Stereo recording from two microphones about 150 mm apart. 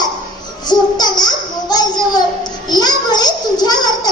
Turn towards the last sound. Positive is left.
turn(degrees=30)  # may be behind; listen again after turning